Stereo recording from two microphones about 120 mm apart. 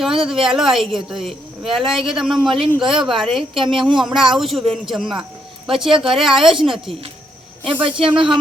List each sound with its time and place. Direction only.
0.4 s a woman's voice: 5° right (ahead or behind)
7.6 s speech: 45° right (ahead or behind)